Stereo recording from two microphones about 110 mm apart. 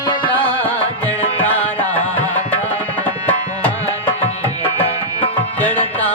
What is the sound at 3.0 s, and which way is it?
Tabla, 15° left (ahead or behind).